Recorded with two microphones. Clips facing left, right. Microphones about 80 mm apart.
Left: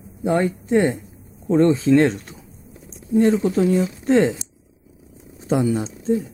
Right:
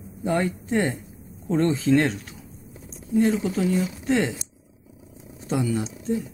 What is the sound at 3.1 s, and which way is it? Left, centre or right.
Speech, left.